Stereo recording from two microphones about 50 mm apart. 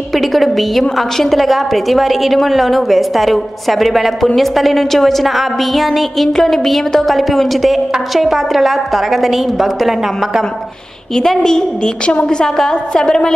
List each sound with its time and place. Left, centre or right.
0.1 s a woman's voice: centre
11.1 s a woman's voice: centre